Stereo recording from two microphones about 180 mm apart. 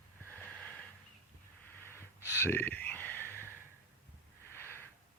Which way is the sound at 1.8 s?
15° left (ahead or behind).